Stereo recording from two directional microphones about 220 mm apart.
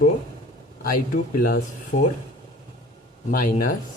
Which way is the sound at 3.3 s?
40° left (ahead or behind).